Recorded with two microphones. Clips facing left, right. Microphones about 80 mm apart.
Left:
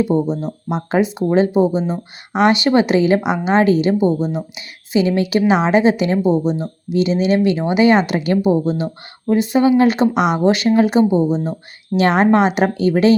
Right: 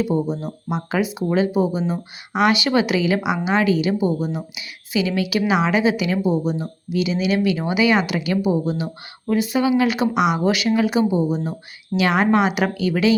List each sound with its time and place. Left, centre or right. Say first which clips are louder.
0.1 s speech: left 4 dB; left